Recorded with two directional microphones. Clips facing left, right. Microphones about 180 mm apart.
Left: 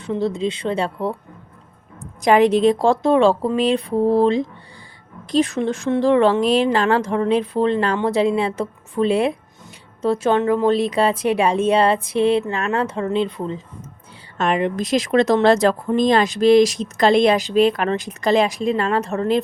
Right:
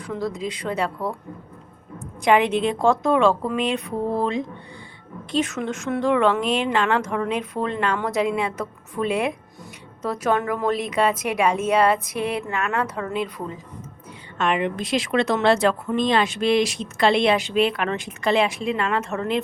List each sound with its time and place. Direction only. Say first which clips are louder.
0.0 s a woman's voice: left 6 dB; 25° left (ahead or behind)
2.2 s a woman's voice: left 5 dB; 40° left (ahead or behind)
14.3 s a woman's voice: left 3 dB; 40° left (ahead or behind)